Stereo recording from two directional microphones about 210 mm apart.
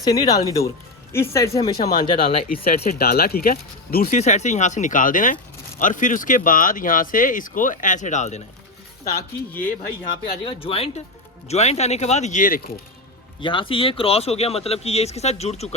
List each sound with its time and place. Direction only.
0.0 s speech: 15° left (ahead or behind)
2.6 s speech: 45° left (ahead or behind)
10.4 s speech: 25° left (ahead or behind); by 12.8 s 45° left (ahead or behind)
13.4 s speech: 25° left (ahead or behind)